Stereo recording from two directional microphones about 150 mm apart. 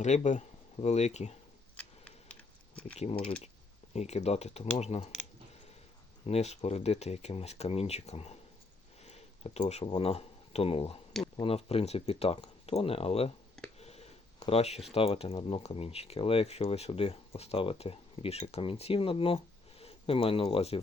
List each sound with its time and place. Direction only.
0.0 s speech: 50° left (ahead or behind)
1.7 s a sound: 10° left (ahead or behind)
3.0 s speech: 45° left (ahead or behind)
6.2 s speech: 45° left (ahead or behind)
13.7 s a sound: 45° left (ahead or behind)
14.9 s speech: 40° left (ahead or behind)